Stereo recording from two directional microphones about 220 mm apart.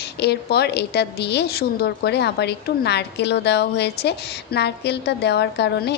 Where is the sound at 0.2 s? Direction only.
50° left (ahead or behind).